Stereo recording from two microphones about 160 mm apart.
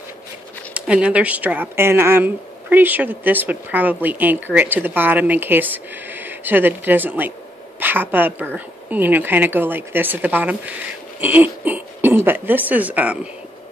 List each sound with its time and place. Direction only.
0.7 s speech: 10° right (ahead or behind)